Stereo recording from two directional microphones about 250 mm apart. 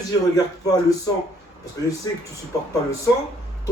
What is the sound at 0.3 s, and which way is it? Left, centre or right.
Speech, centre.